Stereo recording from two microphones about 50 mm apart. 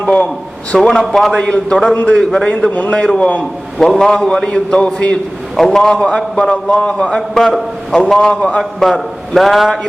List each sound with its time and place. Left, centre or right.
0.8 s a man's voice: centre
1.4 s a man's voice: left
1.7 s a man's voice: centre
5.5 s a man's voice: centre
7.3 s a man's voice: centre
8.1 s a man's voice: centre
8.8 s a man's voice: centre